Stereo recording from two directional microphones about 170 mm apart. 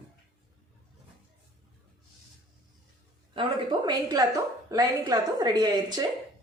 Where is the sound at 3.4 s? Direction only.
25° right (ahead or behind).